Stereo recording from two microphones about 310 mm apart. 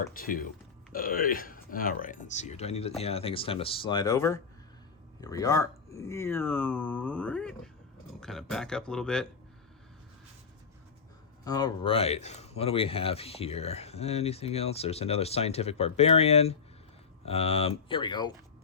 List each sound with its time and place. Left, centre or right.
0.1 s speech: left; by 9.2 s centre
11.4 s speech: centre